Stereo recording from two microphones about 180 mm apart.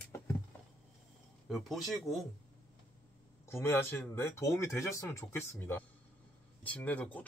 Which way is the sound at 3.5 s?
15° left (ahead or behind).